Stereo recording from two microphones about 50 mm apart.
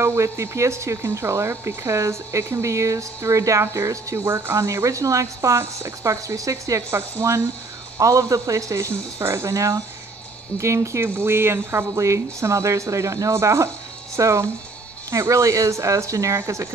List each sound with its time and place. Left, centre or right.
0.0 s speech: right
4.3 s speech: right
7.0 s speech: right
8.0 s speech: right
11.1 s speech: right
11.9 s speech: right
14.1 s speech: right
15.0 s speech: right